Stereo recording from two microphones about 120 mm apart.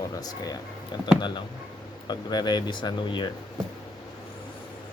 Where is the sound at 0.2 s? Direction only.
30° left (ahead or behind).